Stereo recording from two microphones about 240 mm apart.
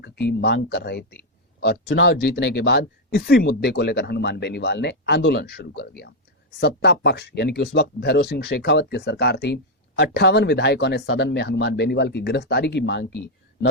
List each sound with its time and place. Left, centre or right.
0.0 s speech: left